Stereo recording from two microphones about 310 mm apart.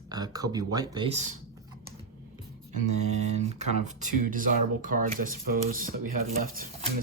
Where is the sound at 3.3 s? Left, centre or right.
Right.